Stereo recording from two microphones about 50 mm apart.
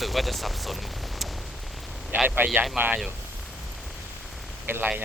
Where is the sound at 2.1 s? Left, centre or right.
Right.